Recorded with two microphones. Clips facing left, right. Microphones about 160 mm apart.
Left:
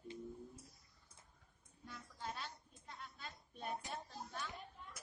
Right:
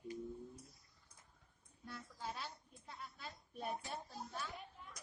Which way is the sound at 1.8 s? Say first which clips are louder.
Right 1 dB; 5° right (ahead or behind).